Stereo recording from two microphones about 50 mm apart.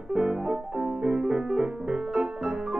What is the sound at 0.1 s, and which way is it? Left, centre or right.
Music, centre.